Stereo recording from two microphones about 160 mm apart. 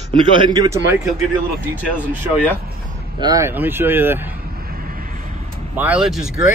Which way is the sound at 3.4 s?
15° right (ahead or behind).